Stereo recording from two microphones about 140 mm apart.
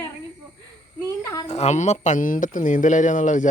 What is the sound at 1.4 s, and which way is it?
Speech, 50° left (ahead or behind).